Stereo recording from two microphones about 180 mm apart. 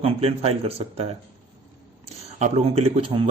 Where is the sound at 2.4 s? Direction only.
35° right (ahead or behind).